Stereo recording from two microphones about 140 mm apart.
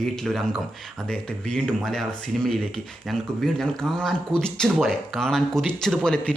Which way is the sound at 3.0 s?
Centre (ahead or behind).